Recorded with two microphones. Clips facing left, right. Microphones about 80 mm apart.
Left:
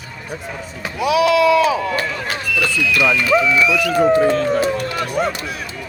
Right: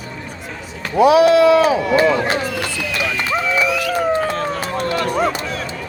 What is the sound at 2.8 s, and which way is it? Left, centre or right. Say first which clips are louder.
Speech: left 6 dB; right.